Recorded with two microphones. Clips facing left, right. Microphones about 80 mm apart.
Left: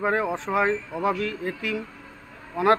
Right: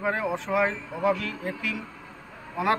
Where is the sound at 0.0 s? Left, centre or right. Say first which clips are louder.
Left 3 dB; left.